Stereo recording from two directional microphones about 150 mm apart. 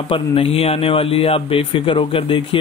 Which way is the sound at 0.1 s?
40° left (ahead or behind).